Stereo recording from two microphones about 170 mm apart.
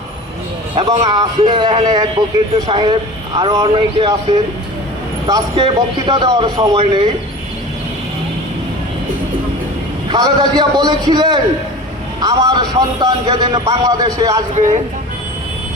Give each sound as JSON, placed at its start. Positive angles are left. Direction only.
{"t": 0.8, "sound": "a man's voice", "side_deg": -25}
{"t": 5.2, "sound": "a man's voice", "side_deg": -30}
{"t": 10.1, "sound": "a man's voice", "side_deg": -25}
{"t": 14.5, "sound": "speech", "side_deg": -45}